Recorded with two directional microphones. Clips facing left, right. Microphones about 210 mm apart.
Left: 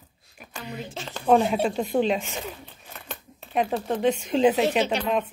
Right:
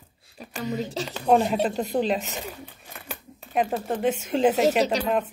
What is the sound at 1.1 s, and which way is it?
Speech, 5° right (ahead or behind).